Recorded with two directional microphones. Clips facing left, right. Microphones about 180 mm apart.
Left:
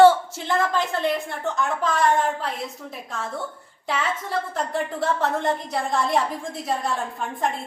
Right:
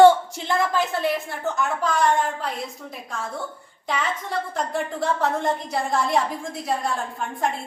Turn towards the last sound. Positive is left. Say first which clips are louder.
# even
turn(degrees=0)  # may be behind; listen again after turning